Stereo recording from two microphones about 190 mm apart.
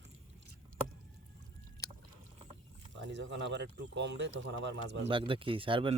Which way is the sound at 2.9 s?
75° right (ahead or behind).